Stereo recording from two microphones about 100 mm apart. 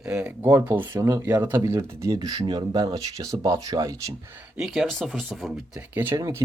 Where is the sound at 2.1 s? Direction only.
40° right (ahead or behind).